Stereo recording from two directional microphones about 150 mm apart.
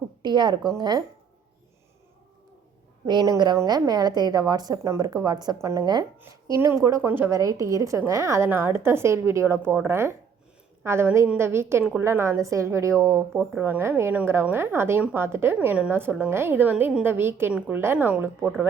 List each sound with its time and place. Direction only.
0.2 s a woman's voice: 30° right (ahead or behind)
3.1 s a woman's voice: 30° right (ahead or behind); by 18.4 s 15° right (ahead or behind)